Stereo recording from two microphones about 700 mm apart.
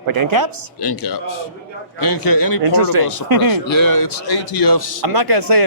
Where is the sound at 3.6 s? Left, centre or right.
Left.